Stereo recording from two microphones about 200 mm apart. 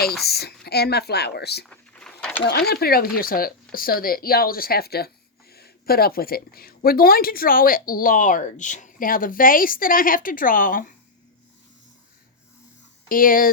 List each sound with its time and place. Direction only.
0.3 s speech: 55° left (ahead or behind)
1.6 s a sound: 5° left (ahead or behind)
2.5 s speech: 50° left (ahead or behind)
13.1 s speech: 45° left (ahead or behind)